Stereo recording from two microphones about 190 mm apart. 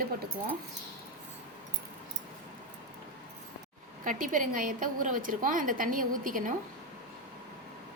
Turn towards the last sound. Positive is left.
turn(degrees=-45)  # may be behind; listen again after turning